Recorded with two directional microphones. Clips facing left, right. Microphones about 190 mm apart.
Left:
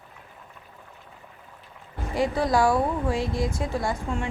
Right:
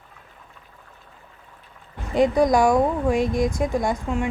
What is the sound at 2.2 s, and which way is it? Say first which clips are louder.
A woman's voice: right 5 dB; 20° right (ahead or behind).